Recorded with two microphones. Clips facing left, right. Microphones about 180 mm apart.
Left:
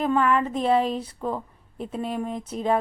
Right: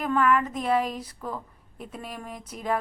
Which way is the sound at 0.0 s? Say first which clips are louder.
Left 2 dB; 30° left (ahead or behind).